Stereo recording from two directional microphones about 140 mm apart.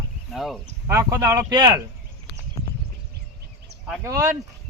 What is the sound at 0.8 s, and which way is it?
A man's voice, 20° right (ahead or behind).